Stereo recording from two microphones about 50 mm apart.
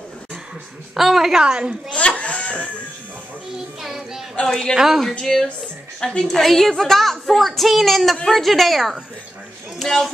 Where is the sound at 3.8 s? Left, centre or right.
Centre.